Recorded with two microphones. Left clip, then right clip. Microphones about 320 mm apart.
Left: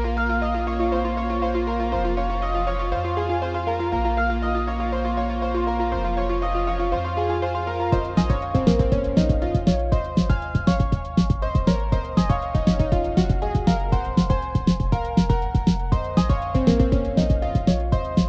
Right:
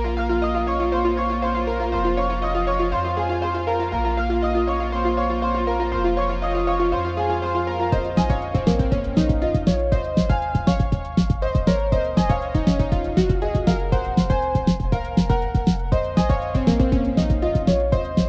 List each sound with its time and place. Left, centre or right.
0.8 s music: left
6.8 s music: centre
7.8 s music: centre
10.1 s music: right
14.7 s music: centre
16.2 s music: centre